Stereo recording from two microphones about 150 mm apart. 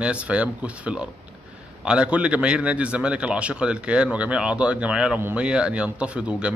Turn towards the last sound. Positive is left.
turn(degrees=-5)  # may be behind; listen again after turning